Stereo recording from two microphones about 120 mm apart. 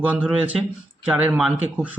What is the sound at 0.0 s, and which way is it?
Speech, 10° right (ahead or behind).